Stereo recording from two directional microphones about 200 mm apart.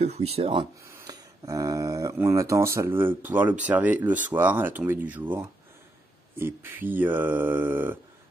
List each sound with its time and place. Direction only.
0.0 s speech: 30° right (ahead or behind)
0.8 s speech: 15° right (ahead or behind)